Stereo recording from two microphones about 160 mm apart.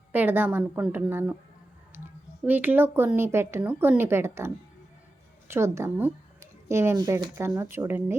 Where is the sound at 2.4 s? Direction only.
10° right (ahead or behind).